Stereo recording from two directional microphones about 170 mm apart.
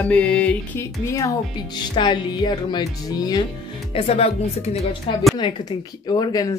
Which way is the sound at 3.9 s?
35° left (ahead or behind).